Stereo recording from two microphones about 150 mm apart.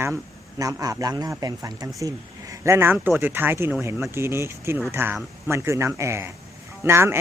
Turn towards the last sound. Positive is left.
turn(degrees=-15)  # may be behind; listen again after turning